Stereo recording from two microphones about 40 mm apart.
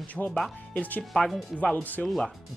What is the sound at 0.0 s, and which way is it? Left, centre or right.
Speech, left.